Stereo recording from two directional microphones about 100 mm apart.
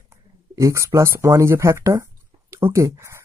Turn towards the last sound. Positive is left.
turn(degrees=-30)  # may be behind; listen again after turning